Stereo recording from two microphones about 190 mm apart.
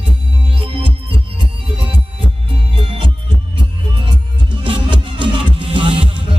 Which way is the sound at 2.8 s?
25° right (ahead or behind).